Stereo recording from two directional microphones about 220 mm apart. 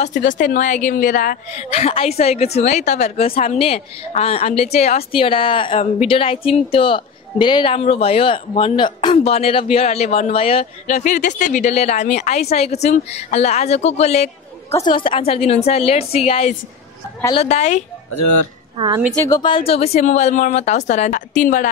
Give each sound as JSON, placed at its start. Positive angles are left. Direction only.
{"t": 0.0, "sound": "a woman's voice", "side_deg": 35}
{"t": 19.1, "sound": "a woman's voice", "side_deg": 15}